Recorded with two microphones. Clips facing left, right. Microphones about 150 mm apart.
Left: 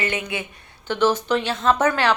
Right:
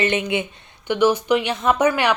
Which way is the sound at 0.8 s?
10° right (ahead or behind).